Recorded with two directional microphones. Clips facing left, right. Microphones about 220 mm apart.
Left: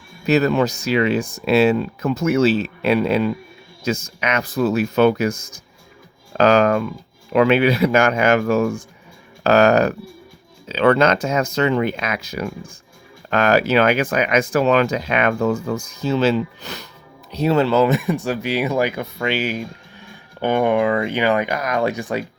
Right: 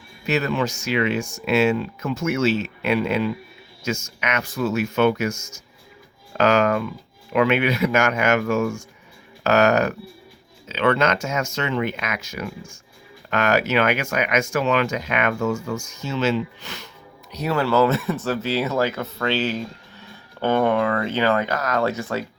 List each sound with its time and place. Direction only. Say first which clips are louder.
0.3 s speech: left 6 dB; 40° left (ahead or behind)
17.3 s speech: left 4 dB; 25° left (ahead or behind)